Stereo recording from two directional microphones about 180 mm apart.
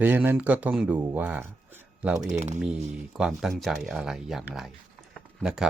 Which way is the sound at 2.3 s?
40° right (ahead or behind).